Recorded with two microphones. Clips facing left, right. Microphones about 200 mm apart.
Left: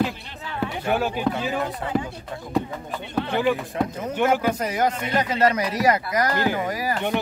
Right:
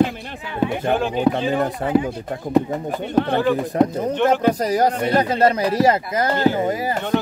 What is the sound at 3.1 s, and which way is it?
Speech, 55° right (ahead or behind).